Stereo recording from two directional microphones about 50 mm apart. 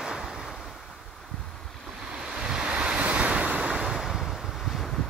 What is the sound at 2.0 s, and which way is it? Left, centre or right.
Waves, centre.